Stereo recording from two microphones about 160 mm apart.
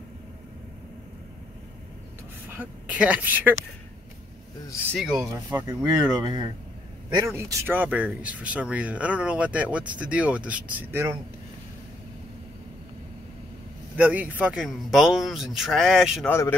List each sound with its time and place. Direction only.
2.4 s speech: 10° right (ahead or behind)
4.9 s speech: 5° right (ahead or behind)
6.1 s speech: 25° right (ahead or behind)
13.9 s speech: 10° right (ahead or behind)
16.3 s a man's voice: 15° left (ahead or behind)